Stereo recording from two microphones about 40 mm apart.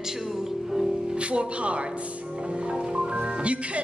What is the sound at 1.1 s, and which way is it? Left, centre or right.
Speech, right.